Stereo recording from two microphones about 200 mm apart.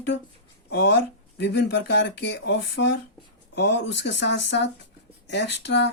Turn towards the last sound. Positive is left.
turn(degrees=60)  # may be behind; listen again after turning